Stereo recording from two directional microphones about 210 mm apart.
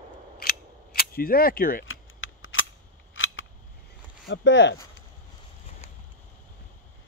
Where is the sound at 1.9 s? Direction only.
70° left (ahead or behind).